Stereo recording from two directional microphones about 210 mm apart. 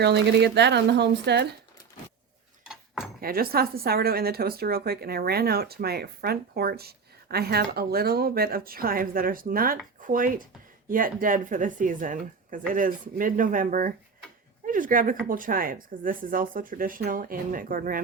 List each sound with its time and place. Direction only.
0.0 s a woman's voice: 50° right (ahead or behind)
2.6 s a sound: centre (ahead or behind)
3.2 s a woman's voice: 45° right (ahead or behind)